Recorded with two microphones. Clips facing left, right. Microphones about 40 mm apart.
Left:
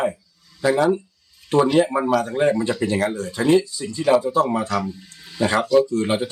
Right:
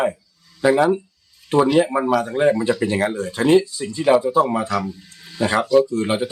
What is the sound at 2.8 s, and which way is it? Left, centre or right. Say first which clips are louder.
Speech: right 1 dB; centre.